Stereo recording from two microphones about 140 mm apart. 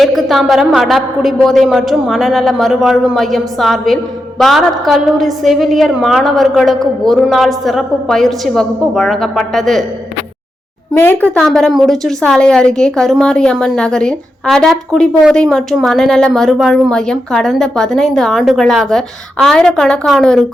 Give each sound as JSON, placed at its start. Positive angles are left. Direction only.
{"t": 0.0, "sound": "a woman's voice", "side_deg": 0}
{"t": 10.9, "sound": "speech", "side_deg": 15}
{"t": 11.3, "sound": "a woman's voice", "side_deg": 5}